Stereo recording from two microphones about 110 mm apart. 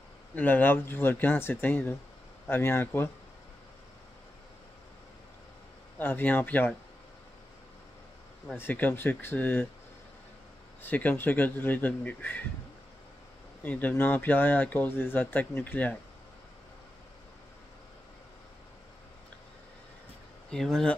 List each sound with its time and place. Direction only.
0.4 s speech: 15° left (ahead or behind)
5.9 s speech: 20° left (ahead or behind)
8.5 s speech: 15° left (ahead or behind)
10.8 s speech: 15° left (ahead or behind)
13.6 s speech: 15° left (ahead or behind)
20.4 s speech: 5° left (ahead or behind)